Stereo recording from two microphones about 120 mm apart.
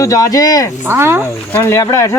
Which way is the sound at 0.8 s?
20° right (ahead or behind).